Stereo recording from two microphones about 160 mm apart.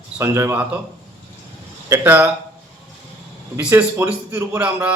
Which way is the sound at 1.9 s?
15° right (ahead or behind).